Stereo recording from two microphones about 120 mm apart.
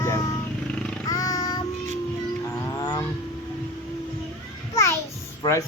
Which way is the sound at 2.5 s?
35° left (ahead or behind).